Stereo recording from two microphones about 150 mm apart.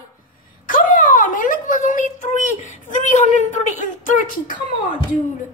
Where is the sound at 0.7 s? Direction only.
60° left (ahead or behind).